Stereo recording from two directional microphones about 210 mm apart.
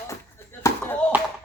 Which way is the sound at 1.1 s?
10° right (ahead or behind).